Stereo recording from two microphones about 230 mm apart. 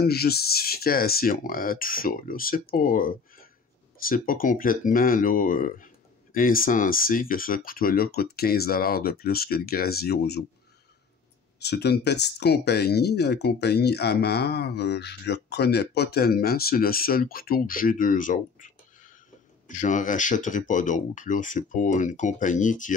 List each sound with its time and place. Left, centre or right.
0.0 s speech: left
11.6 s speech: left